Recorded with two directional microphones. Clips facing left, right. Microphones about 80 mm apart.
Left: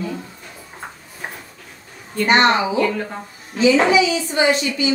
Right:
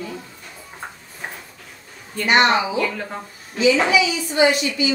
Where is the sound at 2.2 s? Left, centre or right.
Left.